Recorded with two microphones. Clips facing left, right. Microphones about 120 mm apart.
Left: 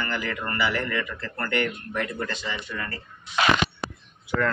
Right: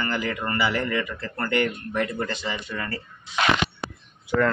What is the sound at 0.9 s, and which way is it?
Speech, 20° right (ahead or behind).